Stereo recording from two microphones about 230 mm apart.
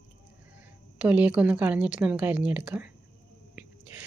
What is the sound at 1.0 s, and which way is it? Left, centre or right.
A woman's voice, centre.